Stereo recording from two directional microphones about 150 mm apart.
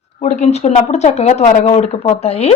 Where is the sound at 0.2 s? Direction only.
50° left (ahead or behind).